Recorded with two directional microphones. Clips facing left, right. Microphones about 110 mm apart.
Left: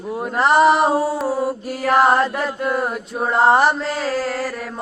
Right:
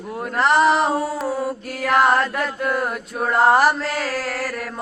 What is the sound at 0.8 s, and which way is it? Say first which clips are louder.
Singing: left 3 dB; 30° left (ahead or behind).